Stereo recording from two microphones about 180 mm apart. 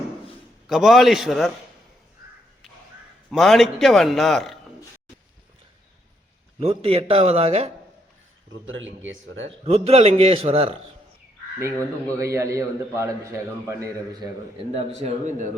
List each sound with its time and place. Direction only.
0.7 s a man's voice: centre (ahead or behind)
3.3 s a man's voice: centre (ahead or behind)
6.6 s a man's voice: 35° right (ahead or behind)
8.6 s speech: 90° right
9.6 s a man's voice: 35° right (ahead or behind)
11.6 s a man's voice: 15° right (ahead or behind)
14.7 s a man's voice: 35° right (ahead or behind)